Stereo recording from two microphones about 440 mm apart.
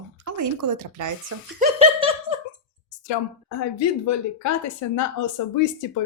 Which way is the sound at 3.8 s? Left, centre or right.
Left.